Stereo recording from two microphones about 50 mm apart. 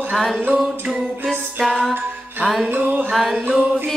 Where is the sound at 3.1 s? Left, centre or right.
Centre.